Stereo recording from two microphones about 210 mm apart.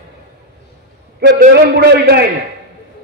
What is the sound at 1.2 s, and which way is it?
A man's voice, 50° right (ahead or behind).